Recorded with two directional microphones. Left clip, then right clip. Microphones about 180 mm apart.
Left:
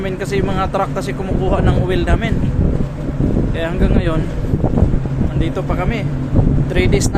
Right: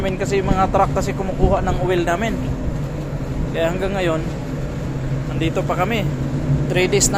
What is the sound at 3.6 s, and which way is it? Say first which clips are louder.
Speech: right 3 dB; 20° left (ahead or behind).